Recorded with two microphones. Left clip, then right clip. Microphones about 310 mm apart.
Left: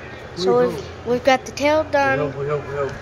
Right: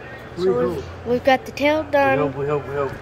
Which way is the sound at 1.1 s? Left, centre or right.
Centre.